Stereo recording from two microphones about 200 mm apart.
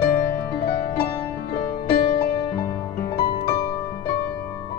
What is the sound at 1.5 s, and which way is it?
Music, 45° left (ahead or behind).